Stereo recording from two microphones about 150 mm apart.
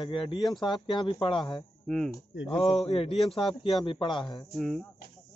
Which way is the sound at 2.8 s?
40° left (ahead or behind).